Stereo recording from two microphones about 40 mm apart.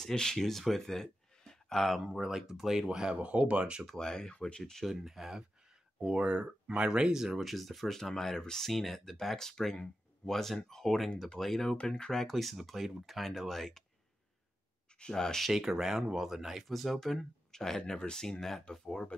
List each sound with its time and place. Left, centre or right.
0.0 s speech: centre
2.0 s speech: centre
3.2 s speech: right
3.8 s speech: centre
4.8 s speech: centre
6.1 s speech: right
7.3 s speech: centre
12.3 s speech: centre
15.0 s speech: centre
15.5 s speech: centre
16.6 s speech: centre